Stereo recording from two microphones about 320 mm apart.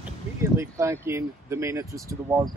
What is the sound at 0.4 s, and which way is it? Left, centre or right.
Speech, centre.